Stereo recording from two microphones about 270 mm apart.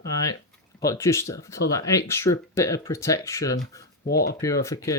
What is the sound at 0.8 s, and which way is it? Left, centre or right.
Speech, centre.